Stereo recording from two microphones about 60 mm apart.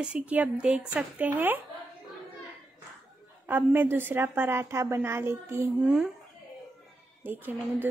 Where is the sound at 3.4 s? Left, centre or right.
Right.